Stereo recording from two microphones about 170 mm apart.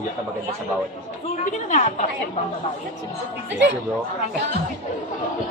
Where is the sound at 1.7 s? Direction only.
45° left (ahead or behind).